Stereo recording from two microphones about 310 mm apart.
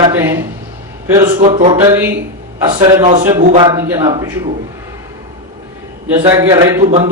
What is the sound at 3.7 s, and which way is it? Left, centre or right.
Speech, centre.